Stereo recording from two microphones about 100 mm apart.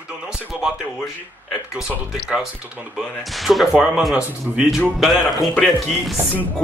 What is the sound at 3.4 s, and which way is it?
Speech, centre (ahead or behind).